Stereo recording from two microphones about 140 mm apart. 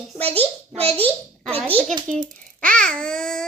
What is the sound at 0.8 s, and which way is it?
Speech, 45° right (ahead or behind).